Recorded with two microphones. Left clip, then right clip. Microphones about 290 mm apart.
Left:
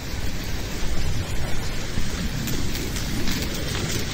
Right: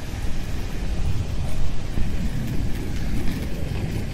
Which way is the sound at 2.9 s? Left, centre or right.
Left.